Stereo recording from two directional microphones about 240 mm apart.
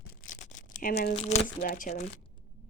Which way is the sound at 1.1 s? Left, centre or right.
Left.